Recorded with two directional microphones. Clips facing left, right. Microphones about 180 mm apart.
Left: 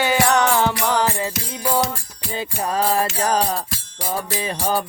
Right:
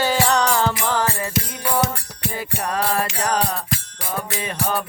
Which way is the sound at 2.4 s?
25° left (ahead or behind).